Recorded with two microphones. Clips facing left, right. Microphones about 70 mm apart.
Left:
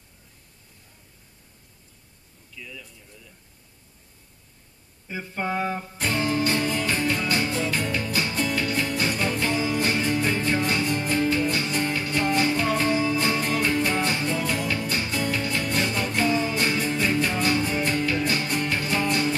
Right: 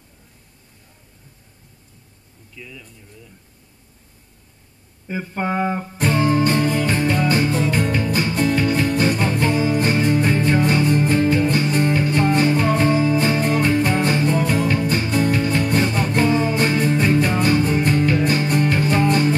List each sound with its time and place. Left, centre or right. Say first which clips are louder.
5.0 s music: right 5 dB; right